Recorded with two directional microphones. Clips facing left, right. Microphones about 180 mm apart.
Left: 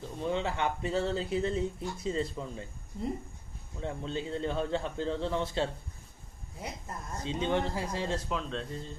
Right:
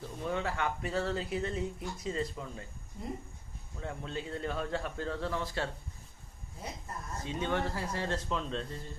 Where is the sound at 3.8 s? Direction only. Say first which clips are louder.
Left 4 dB; 30° left (ahead or behind).